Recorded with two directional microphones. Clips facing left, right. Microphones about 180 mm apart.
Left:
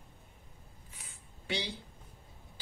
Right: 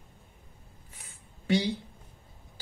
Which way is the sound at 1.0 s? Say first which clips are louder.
Right 1 dB; 45° right (ahead or behind).